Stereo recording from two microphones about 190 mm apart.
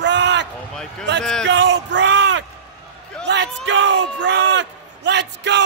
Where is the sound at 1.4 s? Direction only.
70° right (ahead or behind).